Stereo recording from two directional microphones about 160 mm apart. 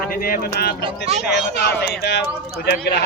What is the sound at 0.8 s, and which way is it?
Speech, 45° right (ahead or behind).